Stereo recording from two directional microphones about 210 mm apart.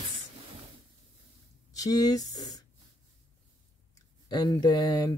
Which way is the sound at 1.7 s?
15° left (ahead or behind).